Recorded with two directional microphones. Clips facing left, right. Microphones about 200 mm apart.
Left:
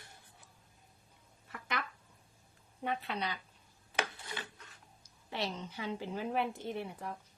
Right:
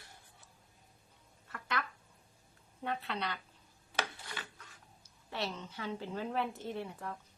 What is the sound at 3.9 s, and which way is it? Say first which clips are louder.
Rub: left 1 dB; 15° left (ahead or behind).